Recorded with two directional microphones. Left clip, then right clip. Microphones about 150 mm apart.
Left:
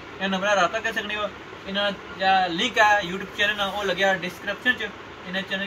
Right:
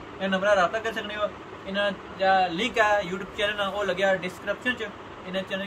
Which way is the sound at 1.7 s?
25° right (ahead or behind).